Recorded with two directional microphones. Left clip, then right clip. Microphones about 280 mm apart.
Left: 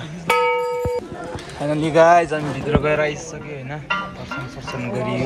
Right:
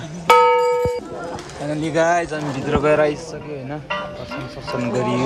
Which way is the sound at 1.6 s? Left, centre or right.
Centre.